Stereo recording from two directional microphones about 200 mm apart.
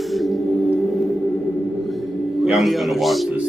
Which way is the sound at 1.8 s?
Centre (ahead or behind).